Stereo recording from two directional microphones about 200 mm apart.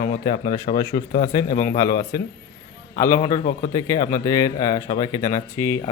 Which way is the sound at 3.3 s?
35° left (ahead or behind).